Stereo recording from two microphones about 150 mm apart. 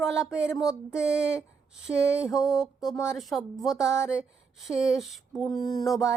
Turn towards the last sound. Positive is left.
turn(degrees=0)  # may be behind; listen again after turning